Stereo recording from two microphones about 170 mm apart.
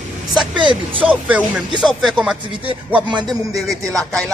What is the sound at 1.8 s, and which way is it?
Music, centre (ahead or behind).